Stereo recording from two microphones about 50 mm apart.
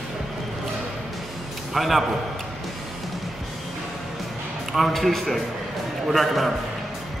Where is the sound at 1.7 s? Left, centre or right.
Centre.